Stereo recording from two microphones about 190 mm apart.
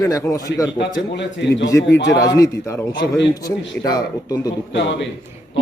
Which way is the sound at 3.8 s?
20° left (ahead or behind).